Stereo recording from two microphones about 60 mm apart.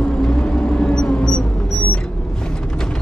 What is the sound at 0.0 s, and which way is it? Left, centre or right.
Vehicle, centre.